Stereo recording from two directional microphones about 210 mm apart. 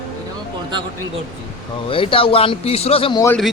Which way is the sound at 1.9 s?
25° left (ahead or behind).